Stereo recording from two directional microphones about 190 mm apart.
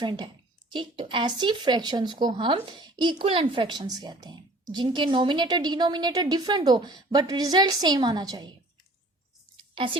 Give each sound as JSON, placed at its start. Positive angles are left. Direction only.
{"t": 0.0, "sound": "speech", "side_deg": -25}
{"t": 9.7, "sound": "speech", "side_deg": -25}